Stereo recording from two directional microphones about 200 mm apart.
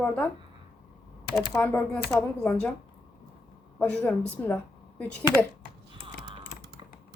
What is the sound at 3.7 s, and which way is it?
Speech, 10° left (ahead or behind).